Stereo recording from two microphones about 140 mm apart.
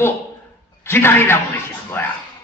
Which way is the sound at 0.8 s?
15° left (ahead or behind).